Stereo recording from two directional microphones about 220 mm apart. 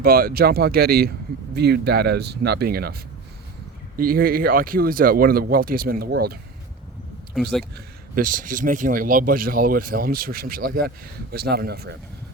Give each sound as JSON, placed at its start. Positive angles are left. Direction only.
{"t": 0.0, "sound": "speech", "side_deg": -40}
{"t": 7.3, "sound": "speech", "side_deg": 0}
{"t": 8.1, "sound": "speech", "side_deg": -40}